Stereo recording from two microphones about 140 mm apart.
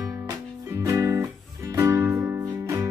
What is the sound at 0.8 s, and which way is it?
Music, 20° right (ahead or behind).